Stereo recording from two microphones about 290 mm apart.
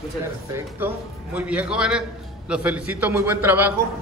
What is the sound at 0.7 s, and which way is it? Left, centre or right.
A man's voice, centre.